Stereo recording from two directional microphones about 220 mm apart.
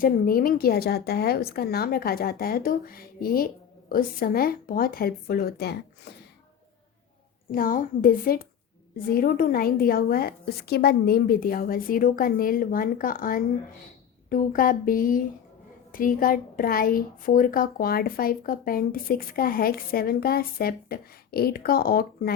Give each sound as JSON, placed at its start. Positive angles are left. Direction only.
{"t": 0.0, "sound": "a woman's voice", "side_deg": 40}
{"t": 7.5, "sound": "a woman's voice", "side_deg": 40}